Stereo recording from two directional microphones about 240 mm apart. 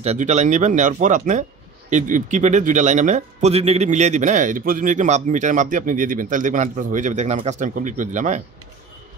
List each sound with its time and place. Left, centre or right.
0.0 s a man's voice: right